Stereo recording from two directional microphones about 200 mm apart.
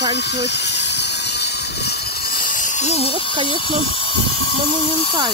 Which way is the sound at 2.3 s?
40° left (ahead or behind).